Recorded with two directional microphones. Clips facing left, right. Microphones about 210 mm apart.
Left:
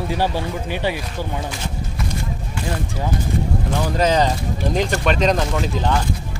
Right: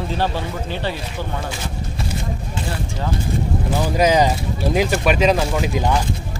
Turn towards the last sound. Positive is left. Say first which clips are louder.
# right 1 dB
turn(degrees=-10)  # may be behind; listen again after turning